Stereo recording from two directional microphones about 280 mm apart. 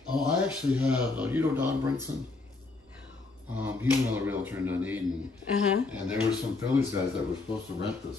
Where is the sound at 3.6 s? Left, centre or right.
Centre.